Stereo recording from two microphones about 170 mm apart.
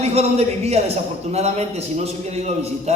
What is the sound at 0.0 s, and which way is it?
A man's voice, 40° right (ahead or behind).